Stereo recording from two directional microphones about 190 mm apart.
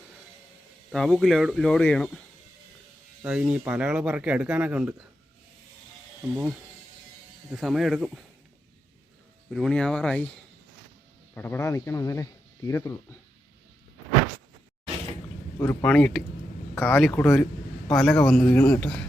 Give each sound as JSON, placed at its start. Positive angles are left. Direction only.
{"t": 0.9, "sound": "speech", "side_deg": 0}
{"t": 3.2, "sound": "speech", "side_deg": -5}
{"t": 7.5, "sound": "speech", "side_deg": 0}
{"t": 9.5, "sound": "speech", "side_deg": 0}
{"t": 11.3, "sound": "speech", "side_deg": 10}
{"t": 15.5, "sound": "speech", "side_deg": 15}